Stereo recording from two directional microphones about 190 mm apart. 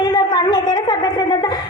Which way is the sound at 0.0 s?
20° left (ahead or behind).